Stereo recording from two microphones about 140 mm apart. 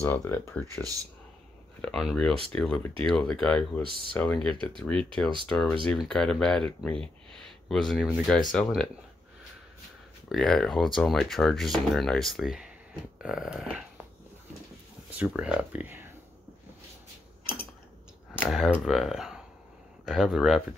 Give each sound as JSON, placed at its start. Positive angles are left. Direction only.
{"t": 0.0, "sound": "speech", "side_deg": 15}
{"t": 1.8, "sound": "speech", "side_deg": 5}
{"t": 10.3, "sound": "speech", "side_deg": 0}
{"t": 15.1, "sound": "speech", "side_deg": -5}
{"t": 18.5, "sound": "speech", "side_deg": 0}